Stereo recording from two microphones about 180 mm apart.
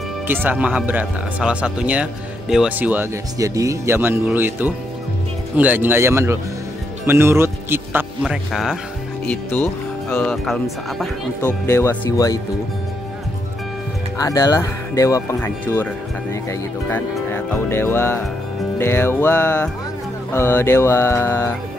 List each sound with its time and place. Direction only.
0.3 s speech: 10° right (ahead or behind)
8.2 s speech: centre (ahead or behind)
11.6 s speech: 15° left (ahead or behind)
14.1 s speech: 20° left (ahead or behind)